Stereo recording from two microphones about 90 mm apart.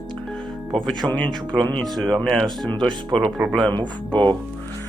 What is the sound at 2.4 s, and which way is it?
Speech, 60° right (ahead or behind).